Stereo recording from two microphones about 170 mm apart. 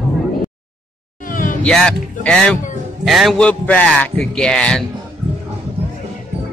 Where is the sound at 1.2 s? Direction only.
50° left (ahead or behind).